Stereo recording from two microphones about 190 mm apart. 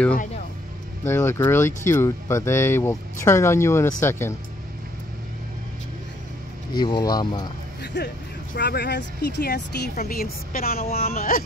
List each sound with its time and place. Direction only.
1.0 s speech: 15° left (ahead or behind)
6.8 s speech: 20° left (ahead or behind)
7.8 s speech: 60° left (ahead or behind)